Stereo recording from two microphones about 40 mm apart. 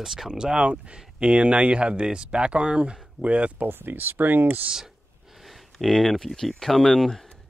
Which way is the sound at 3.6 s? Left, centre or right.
Right.